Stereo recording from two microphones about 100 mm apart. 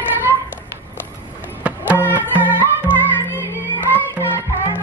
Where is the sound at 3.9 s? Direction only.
20° left (ahead or behind).